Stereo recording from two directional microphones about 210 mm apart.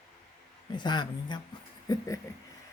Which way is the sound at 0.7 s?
20° left (ahead or behind).